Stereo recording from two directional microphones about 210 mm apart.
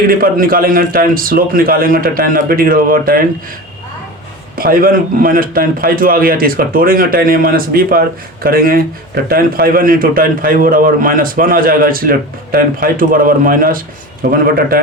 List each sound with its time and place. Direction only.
0.1 s a man's voice: 45° right (ahead or behind)
4.5 s a man's voice: 45° right (ahead or behind)